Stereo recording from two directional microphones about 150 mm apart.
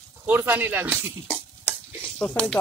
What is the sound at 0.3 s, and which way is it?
Speech, 15° right (ahead or behind).